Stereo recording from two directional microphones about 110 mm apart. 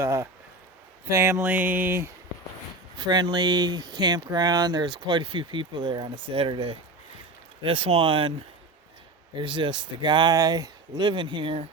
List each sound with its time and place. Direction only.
0.0 s speech: 25° right (ahead or behind)
3.0 s speech: 45° right (ahead or behind)
9.3 s speech: 45° right (ahead or behind)